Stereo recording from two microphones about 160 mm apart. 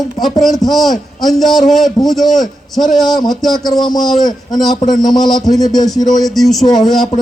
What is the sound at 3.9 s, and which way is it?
A man's voice, centre (ahead or behind).